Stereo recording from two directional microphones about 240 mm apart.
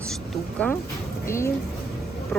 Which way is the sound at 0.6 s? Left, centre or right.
Centre.